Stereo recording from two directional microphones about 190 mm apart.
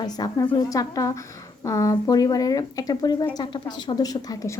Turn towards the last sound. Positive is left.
turn(degrees=20)  # may be behind; listen again after turning